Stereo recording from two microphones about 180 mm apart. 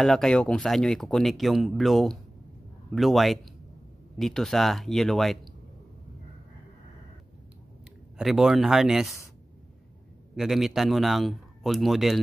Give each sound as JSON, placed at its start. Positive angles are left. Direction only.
{"t": 0.0, "sound": "speech", "side_deg": 0}
{"t": 8.2, "sound": "speech", "side_deg": 0}
{"t": 10.3, "sound": "speech", "side_deg": 0}